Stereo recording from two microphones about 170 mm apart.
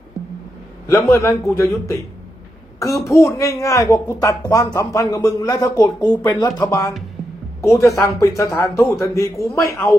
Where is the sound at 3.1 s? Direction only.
15° left (ahead or behind).